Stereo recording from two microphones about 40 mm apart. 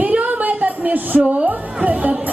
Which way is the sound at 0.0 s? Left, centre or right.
Right.